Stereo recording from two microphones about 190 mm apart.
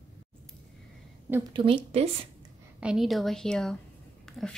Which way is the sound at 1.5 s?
25° right (ahead or behind).